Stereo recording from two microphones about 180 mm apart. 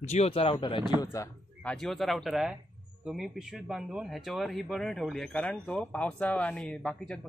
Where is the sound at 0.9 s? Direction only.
20° left (ahead or behind).